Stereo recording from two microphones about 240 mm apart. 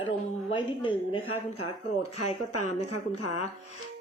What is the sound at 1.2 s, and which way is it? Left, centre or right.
Speech, left.